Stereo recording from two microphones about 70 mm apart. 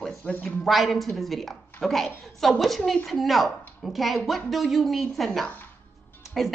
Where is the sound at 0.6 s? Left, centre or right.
Centre.